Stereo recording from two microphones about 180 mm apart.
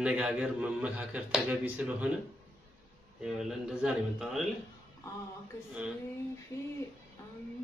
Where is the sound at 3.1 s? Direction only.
5° right (ahead or behind).